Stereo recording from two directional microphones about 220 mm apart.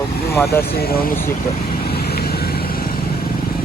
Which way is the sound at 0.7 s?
45° left (ahead or behind).